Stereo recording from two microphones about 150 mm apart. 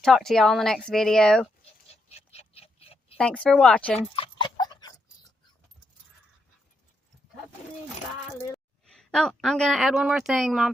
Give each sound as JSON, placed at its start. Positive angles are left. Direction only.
{"t": 0.0, "sound": "speech", "side_deg": 0}
{"t": 1.9, "sound": "a sound", "side_deg": 45}
{"t": 3.2, "sound": "speech", "side_deg": 5}
{"t": 4.1, "sound": "dog", "side_deg": 35}
{"t": 8.3, "sound": "a woman's voice", "side_deg": 0}